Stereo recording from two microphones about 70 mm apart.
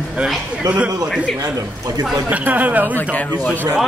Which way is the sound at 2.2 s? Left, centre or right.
Right.